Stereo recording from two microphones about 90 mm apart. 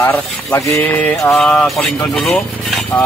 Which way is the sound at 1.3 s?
5° left (ahead or behind).